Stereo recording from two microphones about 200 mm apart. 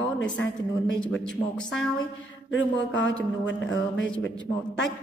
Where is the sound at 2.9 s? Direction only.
70° left (ahead or behind).